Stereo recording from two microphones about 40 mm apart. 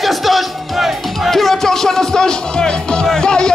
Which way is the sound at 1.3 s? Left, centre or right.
Centre.